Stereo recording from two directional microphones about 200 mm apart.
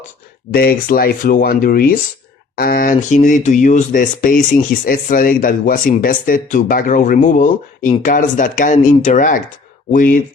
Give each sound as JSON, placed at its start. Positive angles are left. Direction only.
{"t": 0.5, "sound": "speech", "side_deg": 50}